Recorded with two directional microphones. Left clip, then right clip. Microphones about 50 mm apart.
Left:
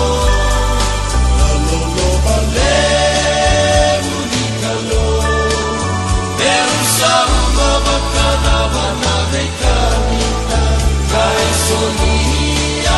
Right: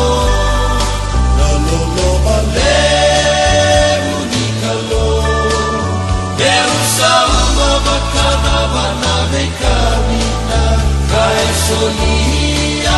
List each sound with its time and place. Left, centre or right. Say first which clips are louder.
2.6 s choir: right 2 dB; right
6.4 s music: right 2 dB; right